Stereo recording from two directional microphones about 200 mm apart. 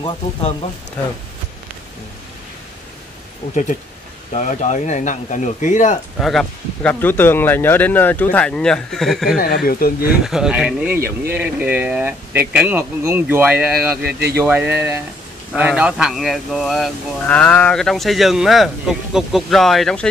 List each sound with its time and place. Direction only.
0.0 s speech: 25° left (ahead or behind)
4.3 s speech: 35° left (ahead or behind)
6.1 s speech: centre (ahead or behind)
9.7 s speech: 45° left (ahead or behind)
10.2 s speech: centre (ahead or behind)